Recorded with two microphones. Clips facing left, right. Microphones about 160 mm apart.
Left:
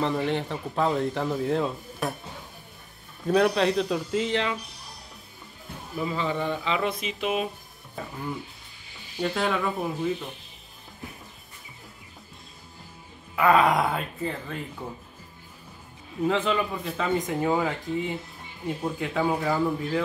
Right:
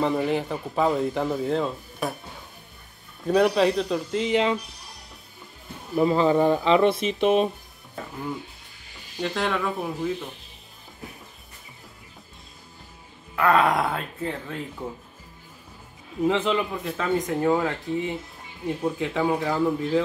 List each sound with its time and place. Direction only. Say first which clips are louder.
0.0 s speech: right 3 dB; 5° right (ahead or behind)
3.3 s speech: right 2 dB; centre (ahead or behind)
5.9 s speech: right 9 dB; 40° right (ahead or behind)
8.0 s speech: even; centre (ahead or behind)
9.2 s speech: even; centre (ahead or behind)
13.4 s speech: even; centre (ahead or behind)
16.5 s speech: right 1 dB; centre (ahead or behind)